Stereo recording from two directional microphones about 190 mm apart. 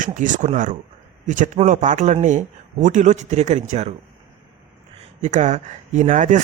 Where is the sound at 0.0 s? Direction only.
40° right (ahead or behind).